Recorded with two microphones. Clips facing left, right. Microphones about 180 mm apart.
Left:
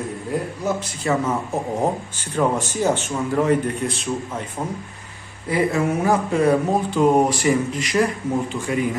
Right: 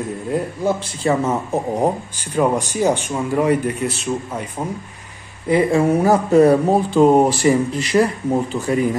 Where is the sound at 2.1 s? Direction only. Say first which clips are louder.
Right 3 dB; 10° right (ahead or behind).